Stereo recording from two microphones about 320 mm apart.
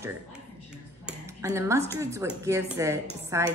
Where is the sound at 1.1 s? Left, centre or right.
Centre.